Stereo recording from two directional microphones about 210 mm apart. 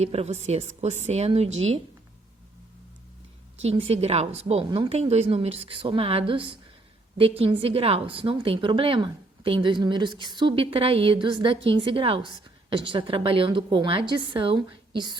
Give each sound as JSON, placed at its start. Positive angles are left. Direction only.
{"t": 0.0, "sound": "a woman's voice", "side_deg": -30}
{"t": 3.6, "sound": "a woman's voice", "side_deg": -30}